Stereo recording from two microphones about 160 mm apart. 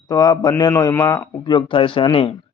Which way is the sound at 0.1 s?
25° left (ahead or behind).